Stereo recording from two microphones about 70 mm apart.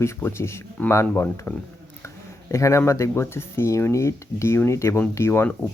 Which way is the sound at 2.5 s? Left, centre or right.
Left.